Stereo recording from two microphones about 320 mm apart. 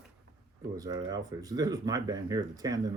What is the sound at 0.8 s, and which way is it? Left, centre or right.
Speech, centre.